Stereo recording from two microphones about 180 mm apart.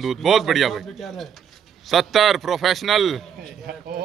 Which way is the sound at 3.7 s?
60° right (ahead or behind).